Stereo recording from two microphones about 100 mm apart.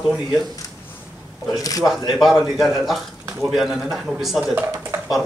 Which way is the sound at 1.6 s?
35° left (ahead or behind).